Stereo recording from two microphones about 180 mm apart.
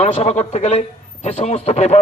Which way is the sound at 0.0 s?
40° left (ahead or behind).